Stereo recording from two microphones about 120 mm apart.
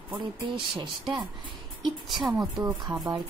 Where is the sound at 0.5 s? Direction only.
45° right (ahead or behind).